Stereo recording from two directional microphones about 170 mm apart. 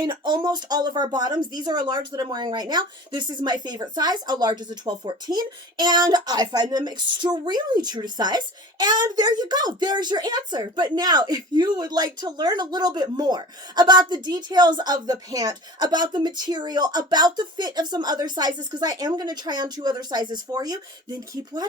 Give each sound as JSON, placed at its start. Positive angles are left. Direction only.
{"t": 0.0, "sound": "speech", "side_deg": -25}